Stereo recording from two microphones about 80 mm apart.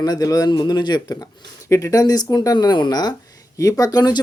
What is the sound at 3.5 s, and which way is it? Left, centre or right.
Speech, left.